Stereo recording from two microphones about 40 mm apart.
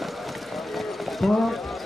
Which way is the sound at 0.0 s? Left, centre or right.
Centre.